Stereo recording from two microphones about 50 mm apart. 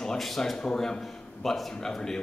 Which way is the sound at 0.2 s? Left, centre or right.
Centre.